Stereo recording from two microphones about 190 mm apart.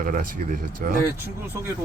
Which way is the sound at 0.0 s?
45° right (ahead or behind).